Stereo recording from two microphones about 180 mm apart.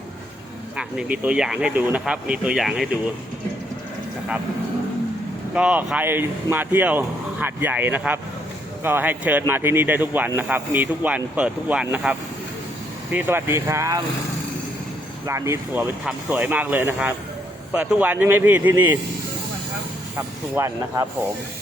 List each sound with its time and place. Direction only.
0.8 s speech: 5° right (ahead or behind)
5.5 s speech: 5° right (ahead or behind)
13.1 s speech: 10° right (ahead or behind)
15.3 s speech: 15° right (ahead or behind)
20.6 s speech: 15° right (ahead or behind)